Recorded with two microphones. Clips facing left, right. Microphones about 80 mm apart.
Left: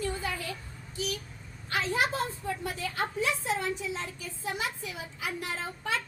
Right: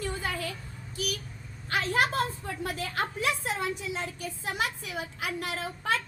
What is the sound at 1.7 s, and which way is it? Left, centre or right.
A woman's voice, right.